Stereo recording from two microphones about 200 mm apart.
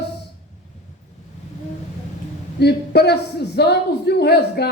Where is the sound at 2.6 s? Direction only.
55° left (ahead or behind).